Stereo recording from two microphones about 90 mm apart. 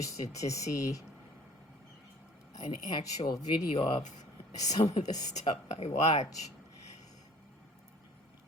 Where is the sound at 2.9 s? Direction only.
45° left (ahead or behind).